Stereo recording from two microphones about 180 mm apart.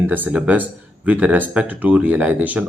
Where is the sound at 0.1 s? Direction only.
10° right (ahead or behind).